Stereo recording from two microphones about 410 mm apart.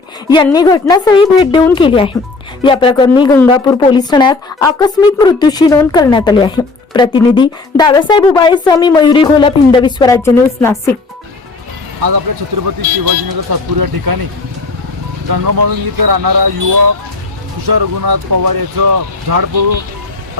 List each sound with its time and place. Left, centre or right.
0.3 s a woman's voice: centre
12.0 s speech: right
15.3 s speech: right